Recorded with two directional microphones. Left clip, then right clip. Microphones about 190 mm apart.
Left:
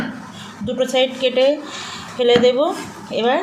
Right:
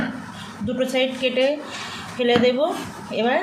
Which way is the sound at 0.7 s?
30° left (ahead or behind).